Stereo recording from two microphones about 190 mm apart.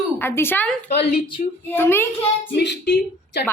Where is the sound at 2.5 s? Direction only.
65° left (ahead or behind).